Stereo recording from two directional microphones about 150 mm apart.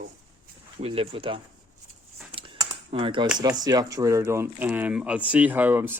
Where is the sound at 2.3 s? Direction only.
35° right (ahead or behind).